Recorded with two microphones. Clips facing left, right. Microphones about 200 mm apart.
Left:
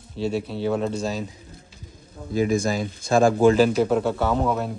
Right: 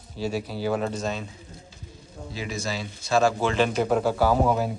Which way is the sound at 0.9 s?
35° left (ahead or behind).